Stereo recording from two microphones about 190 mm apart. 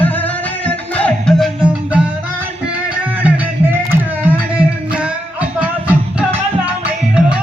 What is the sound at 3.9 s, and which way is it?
Music, 10° right (ahead or behind).